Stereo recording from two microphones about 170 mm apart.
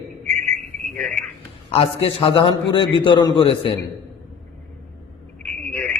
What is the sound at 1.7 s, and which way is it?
A man's voice, 35° left (ahead or behind).